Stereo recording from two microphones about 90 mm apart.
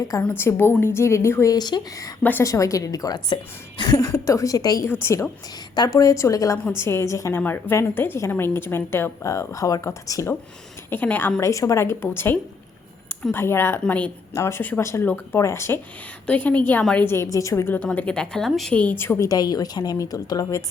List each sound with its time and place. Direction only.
0.2 s a woman's voice: 20° left (ahead or behind)
1.5 s a woman's voice: 50° left (ahead or behind)
2.4 s a woman's voice: 35° left (ahead or behind)
4.9 s a woman's voice: 30° left (ahead or behind)
5.7 s a woman's voice: 50° left (ahead or behind)
10.8 s a woman's voice: 20° left (ahead or behind)
11.3 s a woman's voice: 35° left (ahead or behind)
13.8 s a woman's voice: 15° left (ahead or behind)
16.2 s a woman's voice: 15° left (ahead or behind)
17.3 s a woman's voice: 35° left (ahead or behind)
17.8 s a woman's voice: 10° left (ahead or behind)
18.7 s a woman's voice: 20° left (ahead or behind)
19.3 s a woman's voice: 45° left (ahead or behind)